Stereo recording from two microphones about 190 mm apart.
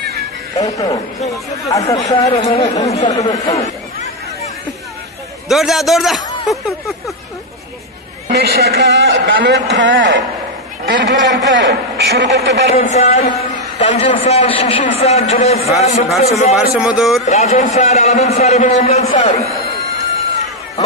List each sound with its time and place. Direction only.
0.6 s a man's voice: 20° left (ahead or behind)
2.4 s a man's voice: 35° left (ahead or behind)
3.1 s a man's voice: 20° left (ahead or behind)
3.5 s chatter: 35° left (ahead or behind)
5.5 s a man's voice: centre (ahead or behind)
8.3 s a man's voice: 60° right (ahead or behind)
12.7 s a man's voice: 35° left (ahead or behind)
16.7 s a man's voice: 5° right (ahead or behind)
17.3 s a man's voice: 35° left (ahead or behind)